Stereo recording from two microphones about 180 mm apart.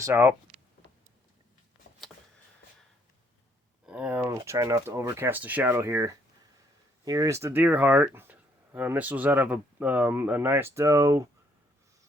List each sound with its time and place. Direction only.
0.0 s speech: 15° right (ahead or behind)
3.8 s speech: 5° right (ahead or behind)